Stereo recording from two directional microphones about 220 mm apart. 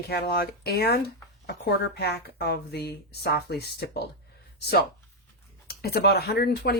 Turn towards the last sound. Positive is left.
turn(degrees=45)  # may be behind; listen again after turning